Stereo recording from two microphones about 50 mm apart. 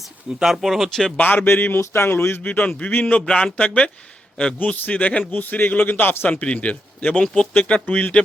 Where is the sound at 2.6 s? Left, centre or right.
Left.